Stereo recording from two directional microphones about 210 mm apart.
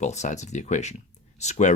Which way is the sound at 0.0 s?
35° left (ahead or behind).